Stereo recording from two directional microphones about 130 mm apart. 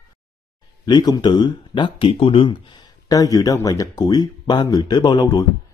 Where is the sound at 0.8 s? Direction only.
35° left (ahead or behind).